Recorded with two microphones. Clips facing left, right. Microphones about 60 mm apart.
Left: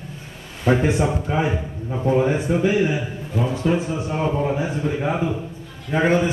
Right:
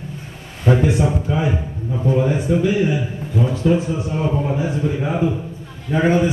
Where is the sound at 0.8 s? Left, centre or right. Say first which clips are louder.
Right 2 dB; left.